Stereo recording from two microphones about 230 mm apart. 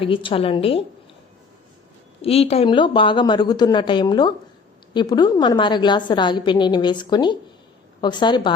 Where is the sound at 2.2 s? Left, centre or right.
Left.